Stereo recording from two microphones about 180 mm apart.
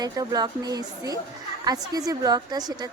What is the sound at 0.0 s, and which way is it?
A woman's voice, 20° right (ahead or behind).